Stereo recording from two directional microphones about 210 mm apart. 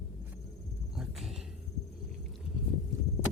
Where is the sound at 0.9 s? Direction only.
Centre (ahead or behind).